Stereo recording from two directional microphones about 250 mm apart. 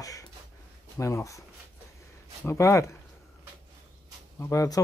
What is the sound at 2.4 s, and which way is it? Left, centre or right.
Speech, centre.